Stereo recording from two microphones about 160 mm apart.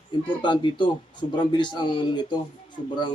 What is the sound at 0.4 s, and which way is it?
Speech, 30° left (ahead or behind).